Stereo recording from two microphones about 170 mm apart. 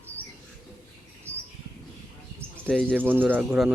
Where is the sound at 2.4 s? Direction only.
10° right (ahead or behind).